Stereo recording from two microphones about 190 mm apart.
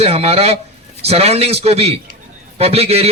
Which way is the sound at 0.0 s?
30° right (ahead or behind).